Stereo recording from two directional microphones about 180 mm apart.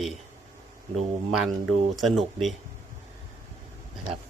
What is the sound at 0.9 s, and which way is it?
Speech, centre (ahead or behind).